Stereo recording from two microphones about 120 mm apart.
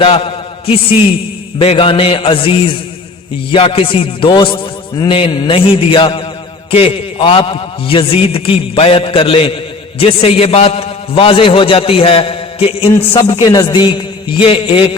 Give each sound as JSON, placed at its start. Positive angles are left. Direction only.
{"t": 0.0, "sound": "a sound", "side_deg": 50}
{"t": 1.5, "sound": "a man's voice", "side_deg": 50}
{"t": 13.4, "sound": "a man's voice", "side_deg": 35}